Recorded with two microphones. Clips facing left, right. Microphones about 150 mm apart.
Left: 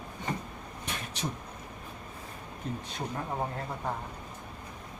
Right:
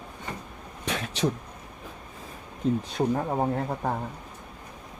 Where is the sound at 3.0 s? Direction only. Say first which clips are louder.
Right 13 dB; 50° right (ahead or behind).